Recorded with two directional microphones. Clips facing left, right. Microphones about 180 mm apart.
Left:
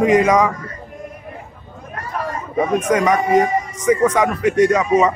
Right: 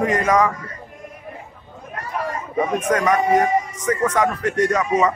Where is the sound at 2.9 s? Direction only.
15° left (ahead or behind).